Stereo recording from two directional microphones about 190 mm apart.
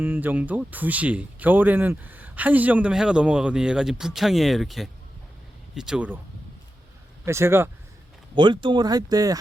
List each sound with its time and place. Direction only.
0.0 s speech: 10° right (ahead or behind)
7.3 s speech: 15° right (ahead or behind)
8.4 s speech: 25° right (ahead or behind)